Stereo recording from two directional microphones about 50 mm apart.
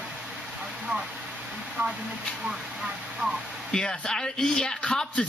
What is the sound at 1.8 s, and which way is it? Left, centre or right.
Speech, right.